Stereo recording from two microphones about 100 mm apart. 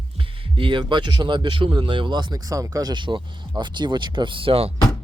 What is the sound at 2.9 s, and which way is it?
Speech, 50° right (ahead or behind).